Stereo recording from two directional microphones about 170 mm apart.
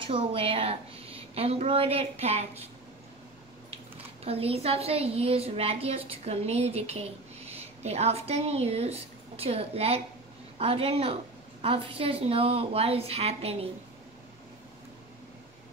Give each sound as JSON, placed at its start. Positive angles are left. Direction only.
{"t": 0.0, "sound": "a woman's voice", "side_deg": -35}
{"t": 4.2, "sound": "a woman's voice", "side_deg": -35}